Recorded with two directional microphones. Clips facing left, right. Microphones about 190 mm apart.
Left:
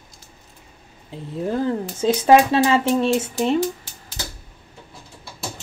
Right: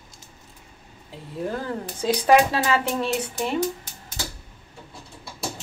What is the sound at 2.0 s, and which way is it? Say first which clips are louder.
Speech: left 3 dB; 25° left (ahead or behind).